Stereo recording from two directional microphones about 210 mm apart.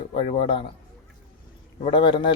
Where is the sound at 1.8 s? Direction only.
25° left (ahead or behind).